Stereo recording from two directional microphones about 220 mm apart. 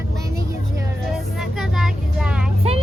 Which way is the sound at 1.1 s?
Centre (ahead or behind).